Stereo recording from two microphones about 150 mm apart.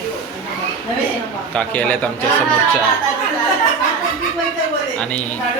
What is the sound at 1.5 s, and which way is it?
Speech, 10° left (ahead or behind).